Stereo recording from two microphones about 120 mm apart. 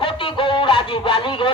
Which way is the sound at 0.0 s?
45° left (ahead or behind).